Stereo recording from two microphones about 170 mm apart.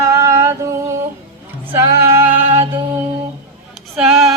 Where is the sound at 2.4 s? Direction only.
35° right (ahead or behind).